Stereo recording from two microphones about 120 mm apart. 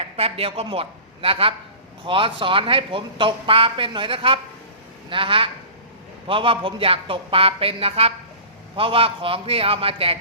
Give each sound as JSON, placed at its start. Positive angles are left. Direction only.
{"t": 0.0, "sound": "a woman's voice", "side_deg": -55}